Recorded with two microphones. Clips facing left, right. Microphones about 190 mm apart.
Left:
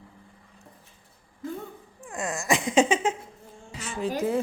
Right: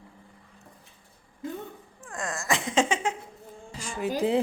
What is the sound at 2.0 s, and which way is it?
Speech, 15° left (ahead or behind).